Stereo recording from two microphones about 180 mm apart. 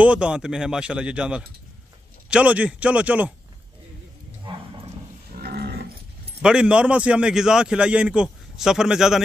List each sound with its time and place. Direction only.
0.0 s a man's voice: 5° right (ahead or behind)
5.3 s livestock: 60° right (ahead or behind)
6.4 s a man's voice: 5° right (ahead or behind)